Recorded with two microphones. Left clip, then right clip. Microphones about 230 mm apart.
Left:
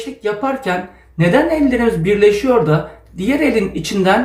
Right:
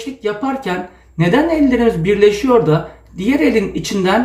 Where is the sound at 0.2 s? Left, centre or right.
Centre.